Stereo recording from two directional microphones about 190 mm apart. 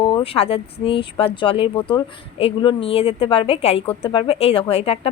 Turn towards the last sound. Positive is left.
turn(degrees=30)  # may be behind; listen again after turning